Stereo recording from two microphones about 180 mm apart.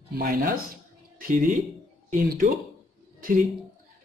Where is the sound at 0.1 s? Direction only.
55° right (ahead or behind).